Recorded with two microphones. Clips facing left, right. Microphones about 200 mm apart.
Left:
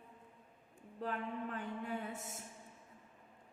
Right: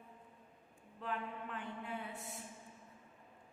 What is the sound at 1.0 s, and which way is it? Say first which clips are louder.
A man's voice: left 3 dB; 40° left (ahead or behind).